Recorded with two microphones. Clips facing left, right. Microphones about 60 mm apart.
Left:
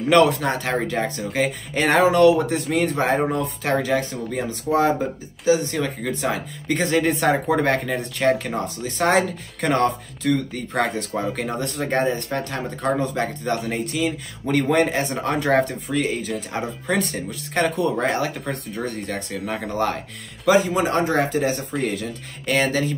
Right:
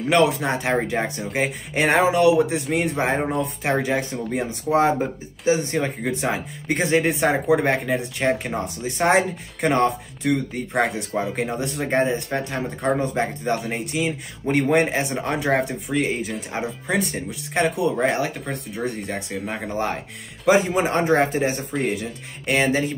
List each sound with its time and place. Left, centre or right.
0.0 s speech: centre
19.7 s speech: right
21.8 s speech: centre